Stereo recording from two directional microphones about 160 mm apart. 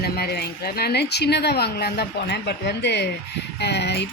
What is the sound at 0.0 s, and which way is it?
Speech, 80° left.